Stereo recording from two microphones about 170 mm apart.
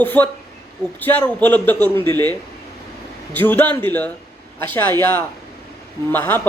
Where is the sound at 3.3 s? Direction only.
10° left (ahead or behind).